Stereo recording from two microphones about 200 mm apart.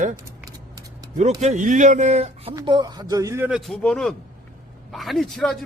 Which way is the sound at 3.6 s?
Centre (ahead or behind).